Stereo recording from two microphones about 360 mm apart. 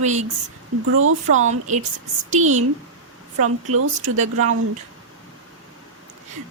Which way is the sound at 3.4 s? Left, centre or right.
Right.